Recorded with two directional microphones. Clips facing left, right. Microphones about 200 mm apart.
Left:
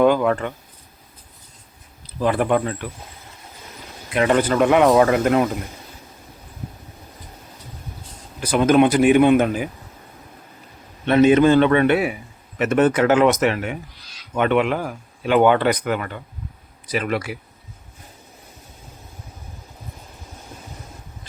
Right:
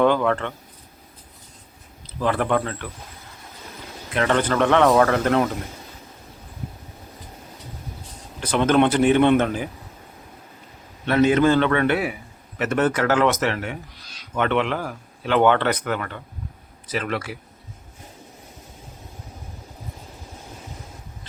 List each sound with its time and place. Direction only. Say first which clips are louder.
0.0 s speech: left 2 dB; 10° left (ahead or behind)
2.0 s speech: left 3 dB; 15° left (ahead or behind)
4.1 s speech: left 3 dB; 15° left (ahead or behind)
8.4 s speech: left 3 dB; 10° left (ahead or behind)
11.0 s a man's voice: left 4 dB; 20° left (ahead or behind)